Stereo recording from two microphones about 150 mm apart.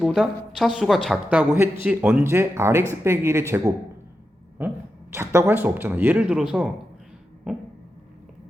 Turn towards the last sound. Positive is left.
turn(degrees=-5)  # may be behind; listen again after turning